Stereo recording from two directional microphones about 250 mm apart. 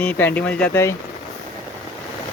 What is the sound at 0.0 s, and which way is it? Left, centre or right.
Speech, centre.